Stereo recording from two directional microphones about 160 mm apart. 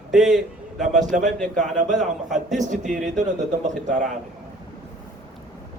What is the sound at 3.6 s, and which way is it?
Speech, 50° right (ahead or behind).